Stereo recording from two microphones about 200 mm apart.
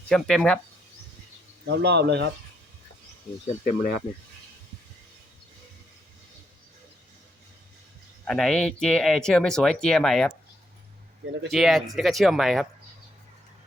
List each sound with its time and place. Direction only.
0.1 s speech: 5° left (ahead or behind)
1.6 s speech: 55° right (ahead or behind)
3.4 s speech: 45° left (ahead or behind)
8.2 s speech: centre (ahead or behind)
11.5 s speech: centre (ahead or behind)